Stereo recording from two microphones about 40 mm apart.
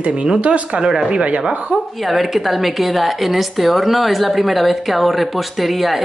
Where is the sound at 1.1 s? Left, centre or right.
Right.